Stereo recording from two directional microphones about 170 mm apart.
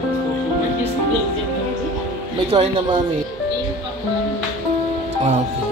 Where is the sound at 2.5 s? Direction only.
35° right (ahead or behind).